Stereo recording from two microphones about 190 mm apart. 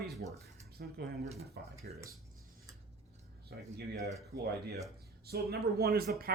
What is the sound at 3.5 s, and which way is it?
Speech, 60° right (ahead or behind).